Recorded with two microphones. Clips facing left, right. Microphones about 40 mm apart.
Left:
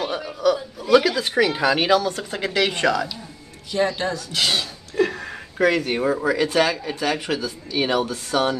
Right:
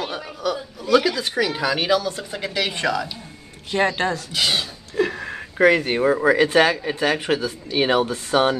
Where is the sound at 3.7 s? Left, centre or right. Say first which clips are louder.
Right 1 dB; right.